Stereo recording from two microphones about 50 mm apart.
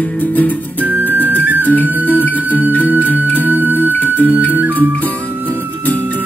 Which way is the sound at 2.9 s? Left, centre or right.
Left.